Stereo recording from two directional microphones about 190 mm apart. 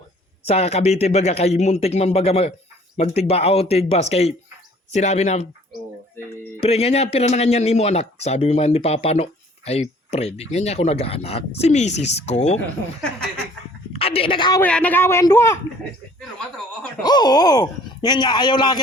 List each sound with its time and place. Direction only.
0.4 s speech: 35° left (ahead or behind)
6.6 s speech: 35° left (ahead or behind)
13.9 s a woman's voice: 30° left (ahead or behind)
14.6 s a man's voice: 5° left (ahead or behind)
17.0 s speech: 20° left (ahead or behind)